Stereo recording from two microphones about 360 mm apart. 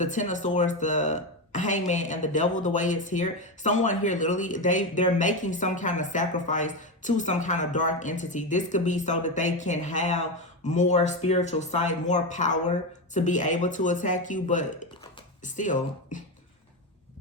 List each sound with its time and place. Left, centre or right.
0.0 s speech: centre